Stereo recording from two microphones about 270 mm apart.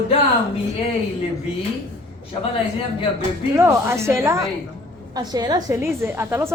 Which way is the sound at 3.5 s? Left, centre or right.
Centre.